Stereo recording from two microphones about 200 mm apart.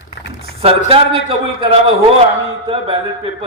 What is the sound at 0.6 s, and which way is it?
A man's voice, 30° right (ahead or behind).